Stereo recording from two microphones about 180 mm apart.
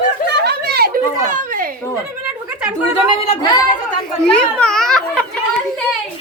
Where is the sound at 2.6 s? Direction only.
5° right (ahead or behind).